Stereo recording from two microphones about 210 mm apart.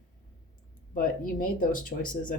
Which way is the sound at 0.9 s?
40° left (ahead or behind).